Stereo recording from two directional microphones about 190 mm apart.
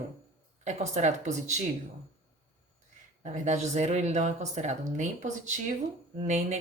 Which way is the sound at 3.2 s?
35° right (ahead or behind).